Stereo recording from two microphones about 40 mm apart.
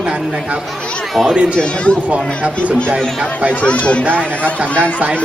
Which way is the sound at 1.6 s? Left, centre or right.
Left.